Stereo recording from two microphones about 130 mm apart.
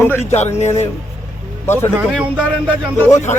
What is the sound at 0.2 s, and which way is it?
Speech, 60° left (ahead or behind).